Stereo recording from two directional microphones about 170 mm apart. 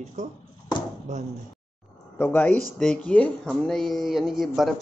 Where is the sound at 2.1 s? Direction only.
10° left (ahead or behind).